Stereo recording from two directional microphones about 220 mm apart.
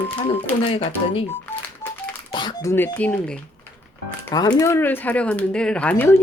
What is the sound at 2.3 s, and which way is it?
Speech, 15° left (ahead or behind).